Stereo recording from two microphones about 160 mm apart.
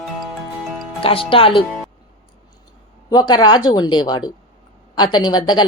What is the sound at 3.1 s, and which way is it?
Speech, 25° left (ahead or behind).